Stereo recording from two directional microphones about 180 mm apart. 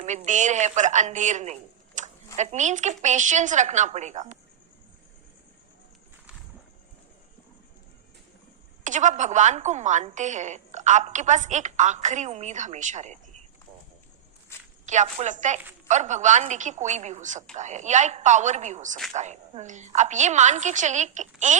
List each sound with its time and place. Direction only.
0.3 s a woman's voice: 40° right (ahead or behind)
2.0 s a sound: 40° right (ahead or behind)
3.0 s a woman's voice: 40° right (ahead or behind)
8.8 s a woman's voice: 45° right (ahead or behind)
14.5 s walk: 15° left (ahead or behind)
14.8 s a woman's voice: 40° right (ahead or behind)